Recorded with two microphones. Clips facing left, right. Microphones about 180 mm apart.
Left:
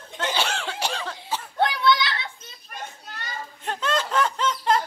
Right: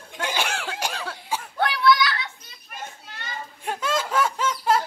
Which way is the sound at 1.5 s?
25° left (ahead or behind).